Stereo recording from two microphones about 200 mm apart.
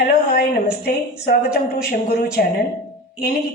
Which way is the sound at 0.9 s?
50° left (ahead or behind).